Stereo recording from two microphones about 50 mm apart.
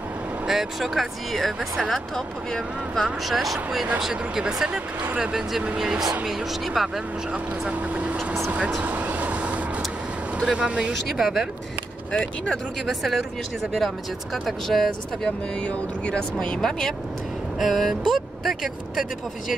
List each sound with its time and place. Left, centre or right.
0.5 s speech: centre
7.2 s speech: right
8.8 s vehicle: right
10.4 s speech: centre
10.9 s speech: centre
12.1 s speech: centre
12.8 s speech: centre
15.2 s speech: centre
17.6 s speech: centre